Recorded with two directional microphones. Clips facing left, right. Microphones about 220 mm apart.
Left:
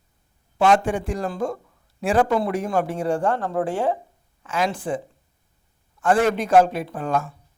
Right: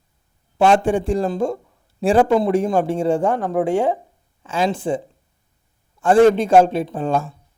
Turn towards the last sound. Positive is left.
turn(degrees=-30)  # may be behind; listen again after turning